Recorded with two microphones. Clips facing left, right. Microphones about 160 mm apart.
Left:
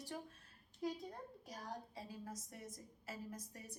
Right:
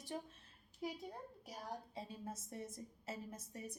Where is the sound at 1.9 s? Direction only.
25° right (ahead or behind).